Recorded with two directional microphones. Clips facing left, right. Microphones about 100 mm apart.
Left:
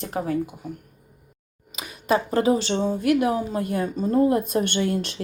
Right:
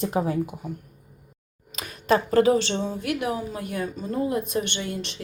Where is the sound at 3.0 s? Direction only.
35° left (ahead or behind).